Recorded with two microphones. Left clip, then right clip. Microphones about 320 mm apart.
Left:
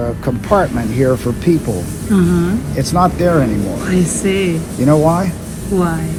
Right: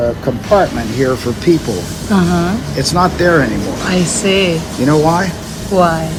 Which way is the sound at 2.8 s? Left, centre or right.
Centre.